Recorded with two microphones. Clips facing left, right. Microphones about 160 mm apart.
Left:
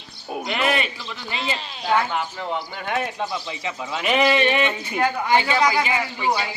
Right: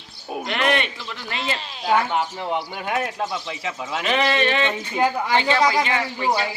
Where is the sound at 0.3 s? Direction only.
Centre (ahead or behind).